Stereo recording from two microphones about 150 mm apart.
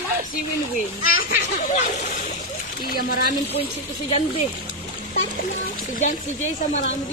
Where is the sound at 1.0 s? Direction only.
75° left (ahead or behind).